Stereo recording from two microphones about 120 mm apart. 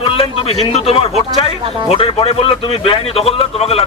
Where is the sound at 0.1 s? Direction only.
55° left (ahead or behind).